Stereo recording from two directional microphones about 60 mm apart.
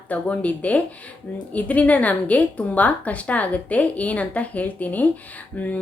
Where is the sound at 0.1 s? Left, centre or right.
Left.